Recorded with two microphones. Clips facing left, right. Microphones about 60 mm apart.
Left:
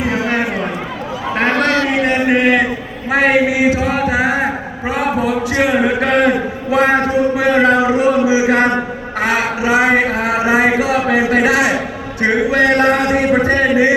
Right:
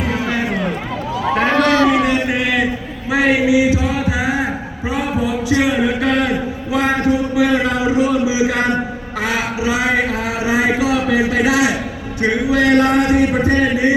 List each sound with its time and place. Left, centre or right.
0.3 s run: left
2.0 s a man's voice: left
4.9 s a sound: left